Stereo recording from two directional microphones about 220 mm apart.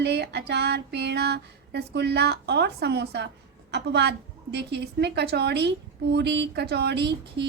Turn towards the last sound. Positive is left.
turn(degrees=-50)  # may be behind; listen again after turning